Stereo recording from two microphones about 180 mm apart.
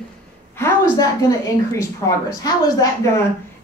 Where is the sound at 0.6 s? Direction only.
15° left (ahead or behind).